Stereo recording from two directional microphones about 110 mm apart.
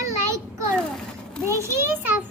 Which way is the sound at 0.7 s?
10° left (ahead or behind).